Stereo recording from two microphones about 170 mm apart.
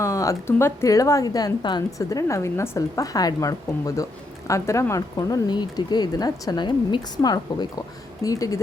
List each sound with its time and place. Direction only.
0.0 s a woman's voice: 20° left (ahead or behind)